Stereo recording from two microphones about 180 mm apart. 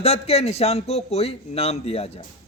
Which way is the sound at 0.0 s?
35° left (ahead or behind).